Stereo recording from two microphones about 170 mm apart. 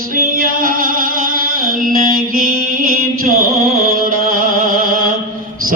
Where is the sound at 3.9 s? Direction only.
55° right (ahead or behind).